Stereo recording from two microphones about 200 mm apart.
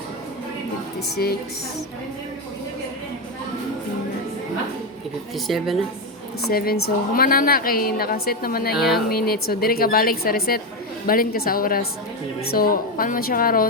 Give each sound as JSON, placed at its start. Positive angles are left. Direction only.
{"t": 1.1, "sound": "a woman's voice", "side_deg": 50}
{"t": 5.5, "sound": "speech", "side_deg": 0}
{"t": 6.5, "sound": "a woman's voice", "side_deg": 50}
{"t": 8.7, "sound": "speech", "side_deg": 0}
{"t": 9.0, "sound": "a woman's voice", "side_deg": 50}